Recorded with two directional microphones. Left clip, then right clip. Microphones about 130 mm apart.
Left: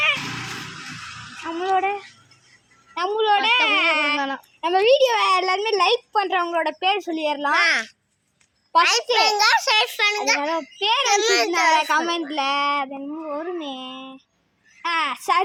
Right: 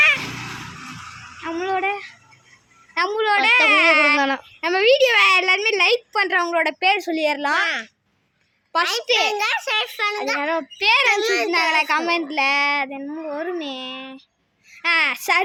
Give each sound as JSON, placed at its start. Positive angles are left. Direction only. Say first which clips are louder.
{"t": 1.5, "sound": "a sound", "louder": "left 2 dB", "side_deg": -35}
{"t": 3.1, "sound": "a sound", "louder": "right 1 dB", "side_deg": -35}
{"t": 7.5, "sound": "a child's voice", "louder": "left 2 dB", "side_deg": 0}
{"t": 10.8, "sound": "speech", "louder": "right 5 dB", "side_deg": -20}
{"t": 11.1, "sound": "female singing", "louder": "even", "side_deg": -10}
{"t": 13.4, "sound": "speech", "louder": "right 2 dB", "side_deg": -20}